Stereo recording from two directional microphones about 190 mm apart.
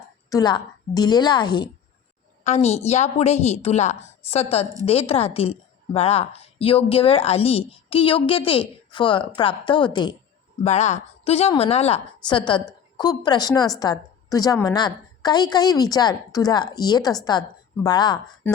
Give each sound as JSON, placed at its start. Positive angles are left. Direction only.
{"t": 0.3, "sound": "a woman's voice", "side_deg": 20}
{"t": 2.4, "sound": "a woman's voice", "side_deg": 35}
{"t": 10.6, "sound": "a woman's voice", "side_deg": 35}
{"t": 18.4, "sound": "speech", "side_deg": 10}